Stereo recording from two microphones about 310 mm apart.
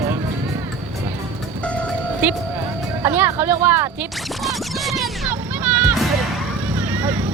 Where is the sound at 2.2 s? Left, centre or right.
Centre.